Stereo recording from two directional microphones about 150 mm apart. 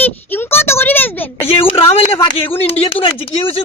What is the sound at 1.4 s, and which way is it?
Speech, 40° left (ahead or behind).